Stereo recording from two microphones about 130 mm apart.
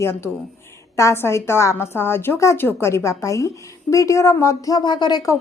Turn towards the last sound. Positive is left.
turn(degrees=30)  # may be behind; listen again after turning